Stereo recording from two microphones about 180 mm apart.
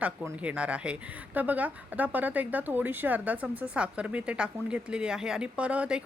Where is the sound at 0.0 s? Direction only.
5° right (ahead or behind).